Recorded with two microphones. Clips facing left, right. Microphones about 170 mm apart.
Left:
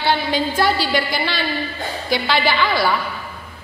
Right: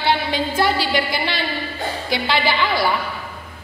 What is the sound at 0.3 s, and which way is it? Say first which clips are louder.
A woman's voice: left 1 dB; 20° right (ahead or behind).